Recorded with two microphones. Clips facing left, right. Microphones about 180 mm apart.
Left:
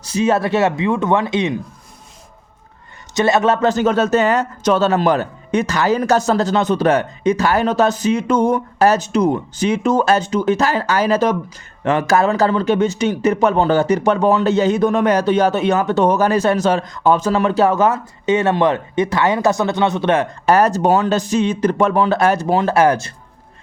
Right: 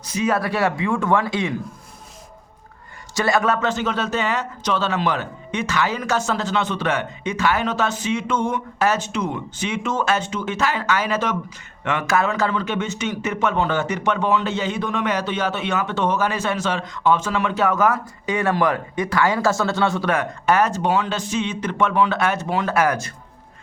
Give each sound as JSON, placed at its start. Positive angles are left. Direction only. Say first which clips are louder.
{"t": 0.1, "sound": "a man's voice", "louder": "left 5 dB", "side_deg": 25}
{"t": 3.2, "sound": "a man's voice", "louder": "left 5 dB", "side_deg": 25}
{"t": 3.7, "sound": "speech", "louder": "left 8 dB", "side_deg": 45}